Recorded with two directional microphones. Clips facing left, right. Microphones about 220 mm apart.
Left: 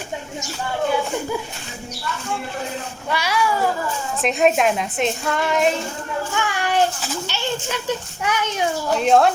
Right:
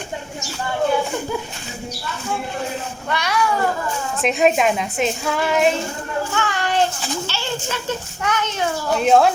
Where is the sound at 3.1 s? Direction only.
5° left (ahead or behind).